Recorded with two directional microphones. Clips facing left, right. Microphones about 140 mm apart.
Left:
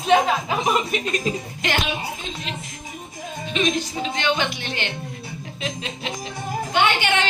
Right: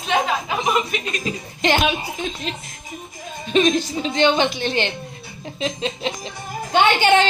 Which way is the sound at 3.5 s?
35° right (ahead or behind).